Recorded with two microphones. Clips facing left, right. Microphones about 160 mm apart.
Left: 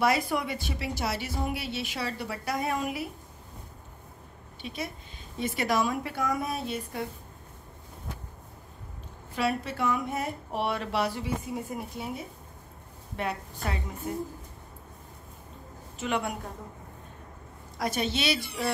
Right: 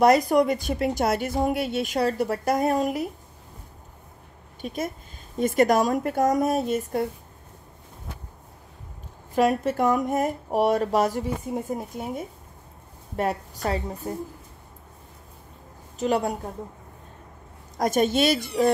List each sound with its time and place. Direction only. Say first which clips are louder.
0.0 s speech: right 9 dB; 40° right (ahead or behind)
4.6 s speech: right 7 dB; 45° right (ahead or behind)
9.3 s a woman's voice: right 8 dB; 45° right (ahead or behind)
16.0 s a woman's voice: right 7 dB; 35° right (ahead or behind)
17.7 s speech: right 8 dB; 45° right (ahead or behind)